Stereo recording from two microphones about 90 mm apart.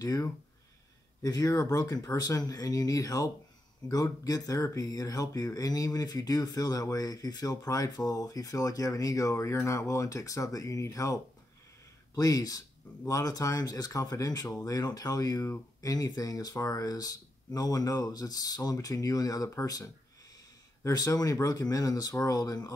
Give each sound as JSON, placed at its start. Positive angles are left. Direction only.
{"t": 0.0, "sound": "speech", "side_deg": 40}
{"t": 12.2, "sound": "speech", "side_deg": 40}